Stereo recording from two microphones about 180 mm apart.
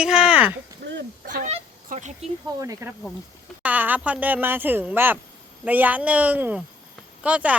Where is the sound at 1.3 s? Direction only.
45° right (ahead or behind).